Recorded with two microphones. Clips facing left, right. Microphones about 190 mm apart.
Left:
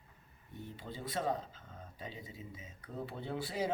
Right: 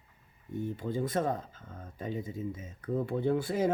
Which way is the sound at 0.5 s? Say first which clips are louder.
Right 13 dB; 50° right (ahead or behind).